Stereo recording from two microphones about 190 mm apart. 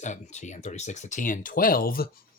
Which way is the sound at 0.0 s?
40° left (ahead or behind).